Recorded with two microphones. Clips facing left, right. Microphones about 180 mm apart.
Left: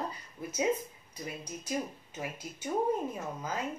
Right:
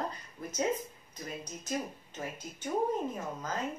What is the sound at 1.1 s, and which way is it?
Speech, 10° left (ahead or behind).